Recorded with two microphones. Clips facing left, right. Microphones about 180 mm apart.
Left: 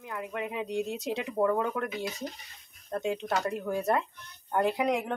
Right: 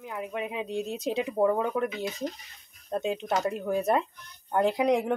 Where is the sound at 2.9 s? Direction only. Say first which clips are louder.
Right 2 dB; 20° right (ahead or behind).